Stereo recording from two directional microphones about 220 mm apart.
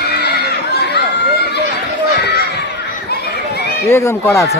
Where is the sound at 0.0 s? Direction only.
50° left (ahead or behind).